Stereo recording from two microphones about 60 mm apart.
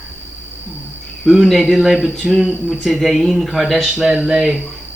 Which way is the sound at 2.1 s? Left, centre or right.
Centre.